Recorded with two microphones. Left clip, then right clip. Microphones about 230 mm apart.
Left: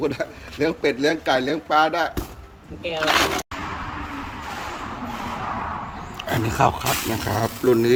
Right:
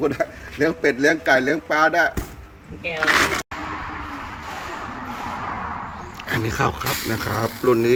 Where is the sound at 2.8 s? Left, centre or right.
Left.